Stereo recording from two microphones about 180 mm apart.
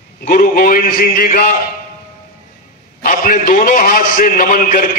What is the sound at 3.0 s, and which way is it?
A man's voice, 50° left (ahead or behind).